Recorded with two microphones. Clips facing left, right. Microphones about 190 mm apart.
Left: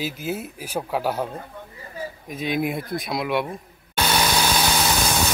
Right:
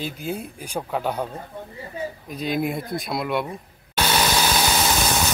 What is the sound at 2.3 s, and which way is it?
Speech, centre (ahead or behind).